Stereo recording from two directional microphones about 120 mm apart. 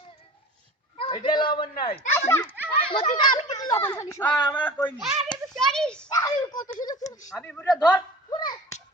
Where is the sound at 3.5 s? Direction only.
30° left (ahead or behind).